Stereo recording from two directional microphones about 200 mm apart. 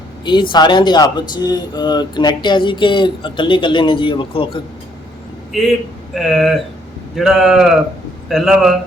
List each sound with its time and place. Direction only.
0.5 s speech: 20° left (ahead or behind)
5.5 s a man's voice: centre (ahead or behind)